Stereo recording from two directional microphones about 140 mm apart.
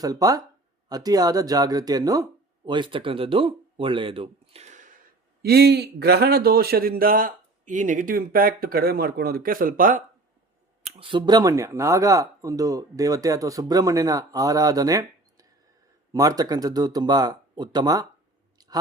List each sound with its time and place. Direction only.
0.0 s speech: 25° right (ahead or behind); by 4.9 s 55° right (ahead or behind)
6.0 s a man's voice: 90° right
10.8 s speech: 40° right (ahead or behind)